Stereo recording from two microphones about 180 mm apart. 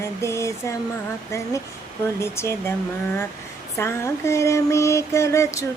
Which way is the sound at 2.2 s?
15° left (ahead or behind).